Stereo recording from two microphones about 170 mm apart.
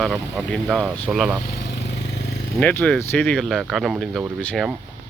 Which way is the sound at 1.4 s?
75° left (ahead or behind).